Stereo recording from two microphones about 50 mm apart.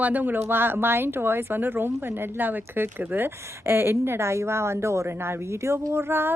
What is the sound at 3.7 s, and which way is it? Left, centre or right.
A woman's voice, right.